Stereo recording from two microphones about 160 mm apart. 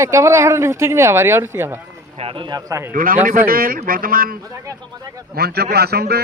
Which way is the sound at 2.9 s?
60° right (ahead or behind).